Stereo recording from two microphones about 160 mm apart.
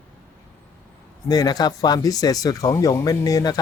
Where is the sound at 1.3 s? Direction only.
25° left (ahead or behind).